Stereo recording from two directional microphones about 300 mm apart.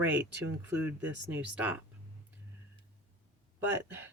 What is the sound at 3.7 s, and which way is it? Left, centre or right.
Speech, centre.